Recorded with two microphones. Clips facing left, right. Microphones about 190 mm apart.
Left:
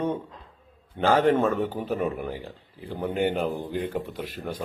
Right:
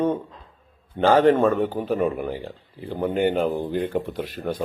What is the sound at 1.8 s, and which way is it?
Speech, centre (ahead or behind).